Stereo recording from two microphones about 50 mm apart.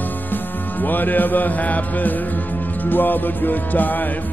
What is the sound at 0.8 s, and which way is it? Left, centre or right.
Music, left.